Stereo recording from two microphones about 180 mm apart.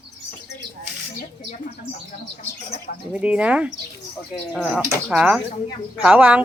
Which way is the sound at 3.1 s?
5° right (ahead or behind).